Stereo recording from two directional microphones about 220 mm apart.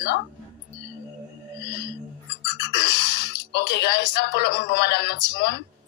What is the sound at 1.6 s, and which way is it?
Whale vocalization, 50° left (ahead or behind).